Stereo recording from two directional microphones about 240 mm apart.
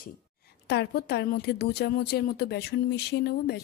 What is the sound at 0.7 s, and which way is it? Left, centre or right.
A woman's voice, left.